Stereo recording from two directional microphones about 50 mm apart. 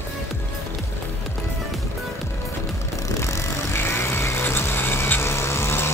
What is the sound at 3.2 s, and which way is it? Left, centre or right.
Vehicle, left.